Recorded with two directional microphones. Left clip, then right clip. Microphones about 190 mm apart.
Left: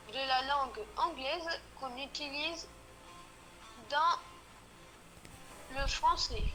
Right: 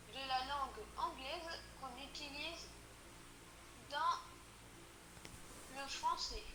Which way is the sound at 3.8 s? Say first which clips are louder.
Left 8 dB; 50° left (ahead or behind).